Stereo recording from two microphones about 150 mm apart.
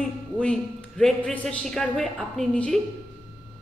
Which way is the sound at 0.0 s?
5° left (ahead or behind).